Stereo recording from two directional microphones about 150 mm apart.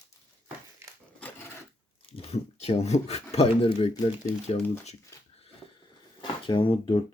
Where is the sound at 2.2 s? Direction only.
45° left (ahead or behind).